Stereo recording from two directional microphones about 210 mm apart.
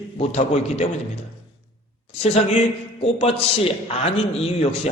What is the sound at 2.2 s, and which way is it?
A man's voice, 30° left (ahead or behind).